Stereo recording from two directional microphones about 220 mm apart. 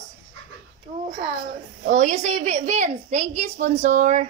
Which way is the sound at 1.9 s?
35° right (ahead or behind).